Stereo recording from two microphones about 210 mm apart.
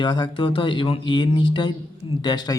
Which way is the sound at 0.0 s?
20° left (ahead or behind).